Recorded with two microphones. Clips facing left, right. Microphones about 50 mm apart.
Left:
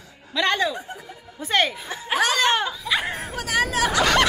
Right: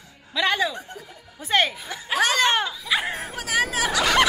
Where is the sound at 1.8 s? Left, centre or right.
Left.